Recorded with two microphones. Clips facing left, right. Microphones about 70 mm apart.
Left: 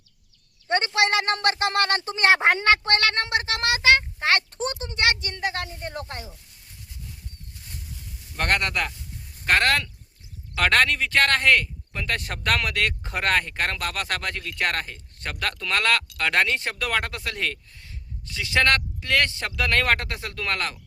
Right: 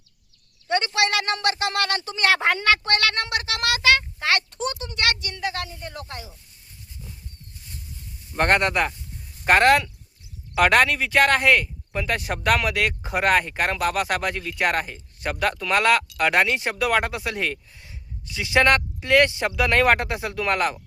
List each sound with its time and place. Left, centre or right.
0.7 s speech: left
8.4 s speech: right